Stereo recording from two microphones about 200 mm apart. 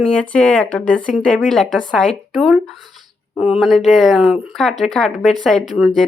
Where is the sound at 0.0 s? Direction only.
5° left (ahead or behind).